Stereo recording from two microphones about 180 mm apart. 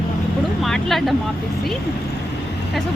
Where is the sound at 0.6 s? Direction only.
Centre (ahead or behind).